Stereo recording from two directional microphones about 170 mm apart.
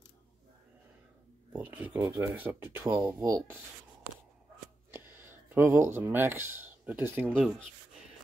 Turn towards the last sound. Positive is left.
turn(degrees=-10)  # may be behind; listen again after turning